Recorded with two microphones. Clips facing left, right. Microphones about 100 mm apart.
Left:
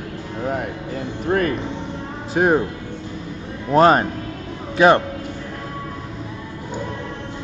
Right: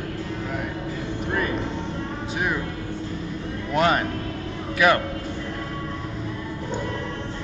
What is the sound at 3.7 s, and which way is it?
A man's voice, 35° left (ahead or behind).